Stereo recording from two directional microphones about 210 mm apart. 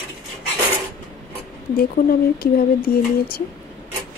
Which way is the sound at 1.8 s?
45° left (ahead or behind).